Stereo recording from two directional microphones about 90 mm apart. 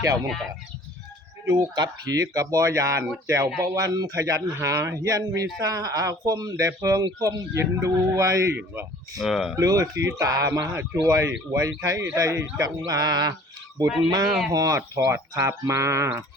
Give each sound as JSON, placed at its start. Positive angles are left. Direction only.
{"t": 1.7, "sound": "speech", "side_deg": -45}
{"t": 8.5, "sound": "speech", "side_deg": -25}
{"t": 9.1, "sound": "speech", "side_deg": 0}
{"t": 9.6, "sound": "speech", "side_deg": -40}
{"t": 10.6, "sound": "speech", "side_deg": -25}
{"t": 11.0, "sound": "speech", "side_deg": -35}
{"t": 12.6, "sound": "a sound", "side_deg": -45}
{"t": 14.8, "sound": "speech", "side_deg": -30}